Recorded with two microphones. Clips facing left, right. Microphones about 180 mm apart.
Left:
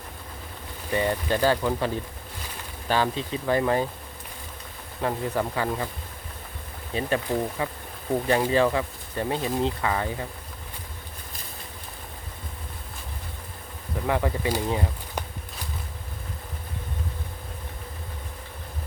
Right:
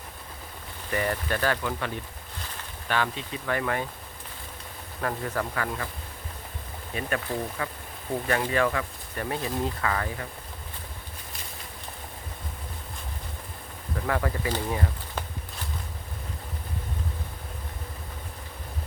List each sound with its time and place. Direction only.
0.9 s speech: 20° left (ahead or behind)
4.9 s speech: 20° left (ahead or behind)
6.9 s speech: 30° left (ahead or behind)
7.3 s speech: 20° left (ahead or behind)
14.1 s speech: 15° left (ahead or behind)